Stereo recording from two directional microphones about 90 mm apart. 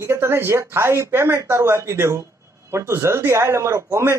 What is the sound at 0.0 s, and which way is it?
Speech, 30° right (ahead or behind).